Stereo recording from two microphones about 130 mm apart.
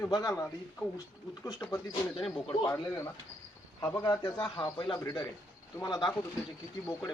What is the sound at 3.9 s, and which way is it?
A man's voice, 25° left (ahead or behind).